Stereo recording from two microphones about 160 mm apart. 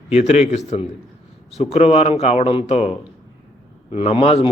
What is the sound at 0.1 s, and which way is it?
A man's voice, 40° left (ahead or behind).